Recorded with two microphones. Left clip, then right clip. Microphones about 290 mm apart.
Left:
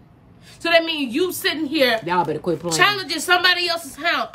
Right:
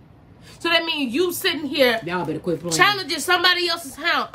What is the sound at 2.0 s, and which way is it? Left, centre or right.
Speech, centre.